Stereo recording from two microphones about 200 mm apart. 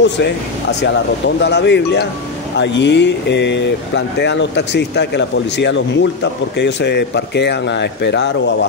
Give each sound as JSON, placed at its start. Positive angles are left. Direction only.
{"t": 0.0, "sound": "speech", "side_deg": 60}